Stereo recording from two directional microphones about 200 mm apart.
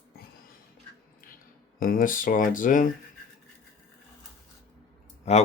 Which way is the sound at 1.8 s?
45° left (ahead or behind).